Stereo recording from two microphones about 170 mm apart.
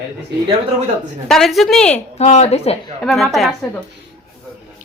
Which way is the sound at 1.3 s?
Centre (ahead or behind).